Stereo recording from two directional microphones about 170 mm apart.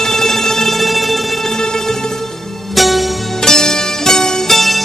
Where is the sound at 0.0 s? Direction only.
Centre (ahead or behind).